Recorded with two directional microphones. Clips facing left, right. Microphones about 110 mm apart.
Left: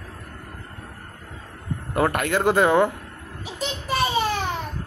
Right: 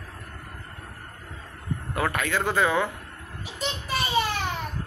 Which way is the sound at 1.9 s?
45° left (ahead or behind).